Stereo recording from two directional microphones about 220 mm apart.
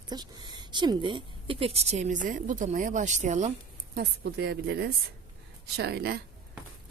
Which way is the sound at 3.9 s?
50° right (ahead or behind).